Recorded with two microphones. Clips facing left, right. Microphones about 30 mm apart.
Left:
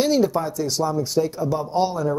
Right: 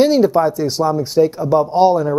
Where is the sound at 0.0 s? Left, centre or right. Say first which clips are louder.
Right 7 dB; right.